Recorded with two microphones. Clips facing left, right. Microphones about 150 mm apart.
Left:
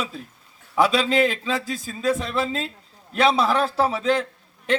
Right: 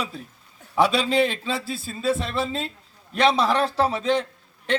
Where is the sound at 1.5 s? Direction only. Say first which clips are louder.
Left 2 dB; 30° right (ahead or behind).